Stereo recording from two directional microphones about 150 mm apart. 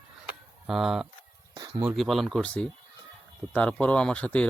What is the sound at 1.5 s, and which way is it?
Speech, 25° right (ahead or behind).